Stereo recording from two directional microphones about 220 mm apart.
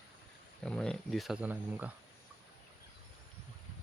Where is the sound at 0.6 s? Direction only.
5° left (ahead or behind).